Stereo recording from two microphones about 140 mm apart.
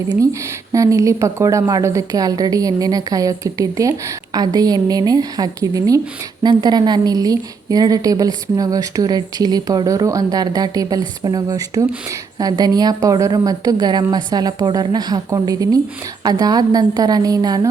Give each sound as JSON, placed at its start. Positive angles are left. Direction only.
{"t": 0.7, "sound": "a woman's voice", "side_deg": -20}